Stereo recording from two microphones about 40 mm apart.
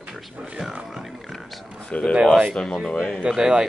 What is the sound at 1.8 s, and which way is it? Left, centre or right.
Speech, left.